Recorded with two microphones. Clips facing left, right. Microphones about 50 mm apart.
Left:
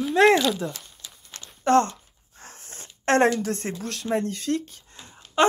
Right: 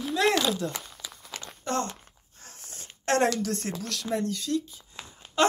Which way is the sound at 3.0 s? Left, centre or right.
Left.